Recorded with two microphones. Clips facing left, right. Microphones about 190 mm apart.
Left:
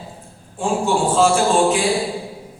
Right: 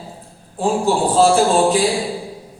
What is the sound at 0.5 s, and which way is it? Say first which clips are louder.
A man's voice: right 2 dB; 35° right (ahead or behind).